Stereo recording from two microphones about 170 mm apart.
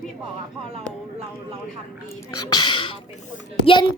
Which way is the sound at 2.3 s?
25° left (ahead or behind).